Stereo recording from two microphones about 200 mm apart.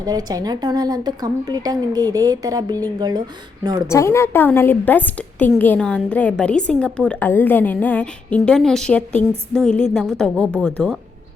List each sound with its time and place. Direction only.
0.0 s a woman's voice: 20° right (ahead or behind)
3.8 s a woman's voice: 15° left (ahead or behind)